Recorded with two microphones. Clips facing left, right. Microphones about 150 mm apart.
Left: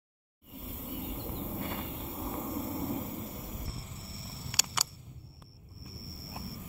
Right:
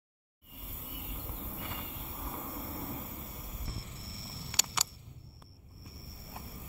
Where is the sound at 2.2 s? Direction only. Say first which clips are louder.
Left 6 dB; 20° left (ahead or behind).